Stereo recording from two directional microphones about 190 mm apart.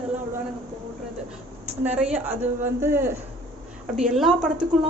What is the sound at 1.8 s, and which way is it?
A woman's voice, 5° right (ahead or behind).